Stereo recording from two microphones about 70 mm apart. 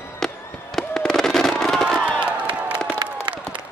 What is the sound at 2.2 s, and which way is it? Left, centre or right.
Crowd, centre.